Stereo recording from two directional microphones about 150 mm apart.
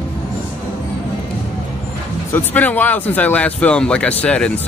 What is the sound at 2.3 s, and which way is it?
Speech, 10° left (ahead or behind).